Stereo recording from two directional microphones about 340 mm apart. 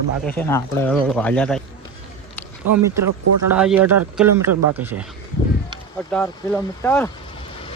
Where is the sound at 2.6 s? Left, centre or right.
Right.